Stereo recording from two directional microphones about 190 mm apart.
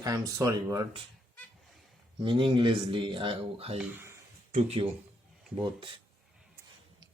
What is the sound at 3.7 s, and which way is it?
Speech, 10° right (ahead or behind).